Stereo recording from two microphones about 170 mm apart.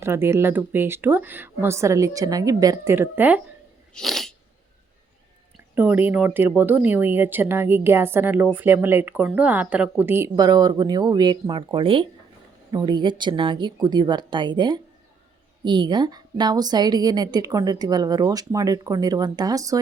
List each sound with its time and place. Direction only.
0.0 s speech: 15° right (ahead or behind)
3.9 s sneeze: centre (ahead or behind)
5.7 s a woman's voice: 10° right (ahead or behind)